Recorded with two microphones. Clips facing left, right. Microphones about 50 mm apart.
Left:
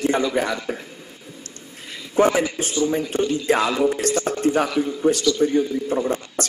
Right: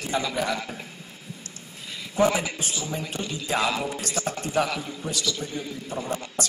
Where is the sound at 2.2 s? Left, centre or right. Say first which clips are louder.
Left 5 dB; left.